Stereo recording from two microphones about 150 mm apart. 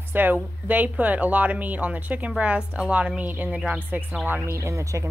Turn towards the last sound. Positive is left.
turn(degrees=-20)  # may be behind; listen again after turning